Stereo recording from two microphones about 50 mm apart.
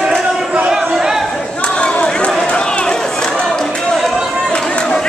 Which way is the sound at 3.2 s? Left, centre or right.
Centre.